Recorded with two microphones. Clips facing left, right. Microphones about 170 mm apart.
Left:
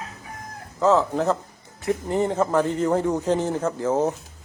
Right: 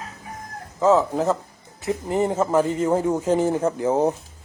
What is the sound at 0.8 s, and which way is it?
A man's voice, 10° right (ahead or behind).